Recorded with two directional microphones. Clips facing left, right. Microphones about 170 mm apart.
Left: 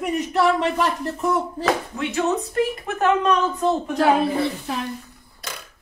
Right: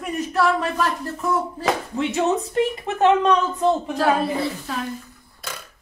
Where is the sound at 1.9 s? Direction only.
20° right (ahead or behind).